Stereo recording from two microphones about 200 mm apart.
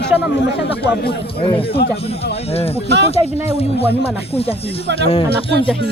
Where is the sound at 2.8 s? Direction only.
60° right (ahead or behind).